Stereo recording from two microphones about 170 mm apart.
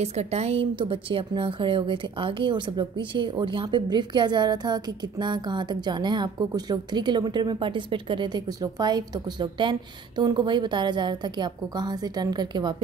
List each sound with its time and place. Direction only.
0.0 s speech: 40° right (ahead or behind)